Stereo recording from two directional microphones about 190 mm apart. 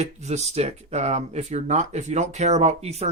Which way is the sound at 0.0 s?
35° right (ahead or behind).